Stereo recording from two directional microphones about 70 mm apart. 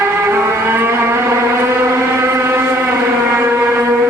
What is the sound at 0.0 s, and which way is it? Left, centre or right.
Vehicle, right.